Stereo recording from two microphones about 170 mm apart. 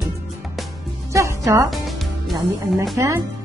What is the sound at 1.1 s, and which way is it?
Speech, 20° right (ahead or behind).